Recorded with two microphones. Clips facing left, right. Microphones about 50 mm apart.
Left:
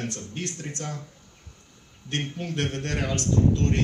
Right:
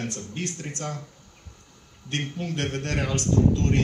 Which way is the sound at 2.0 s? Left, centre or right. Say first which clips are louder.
Even; left.